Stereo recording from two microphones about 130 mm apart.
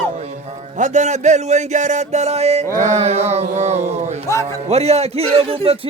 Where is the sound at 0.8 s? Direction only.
65° right (ahead or behind).